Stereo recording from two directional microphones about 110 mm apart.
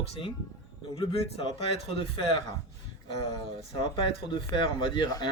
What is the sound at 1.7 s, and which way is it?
Speech, 65° left (ahead or behind).